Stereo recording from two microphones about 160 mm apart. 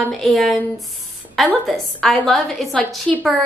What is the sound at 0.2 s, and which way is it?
A woman's voice, centre (ahead or behind).